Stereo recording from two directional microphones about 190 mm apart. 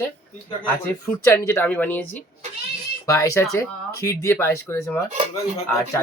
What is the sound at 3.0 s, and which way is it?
Speech, 15° left (ahead or behind).